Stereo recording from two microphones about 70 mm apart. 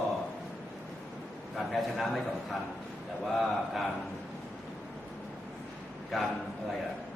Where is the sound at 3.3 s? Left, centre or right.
Centre.